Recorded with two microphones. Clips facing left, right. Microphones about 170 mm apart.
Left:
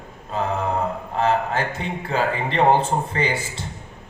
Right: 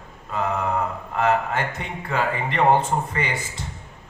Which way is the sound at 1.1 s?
30° left (ahead or behind).